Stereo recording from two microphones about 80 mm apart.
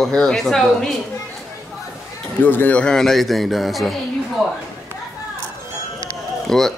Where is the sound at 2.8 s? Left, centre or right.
Centre.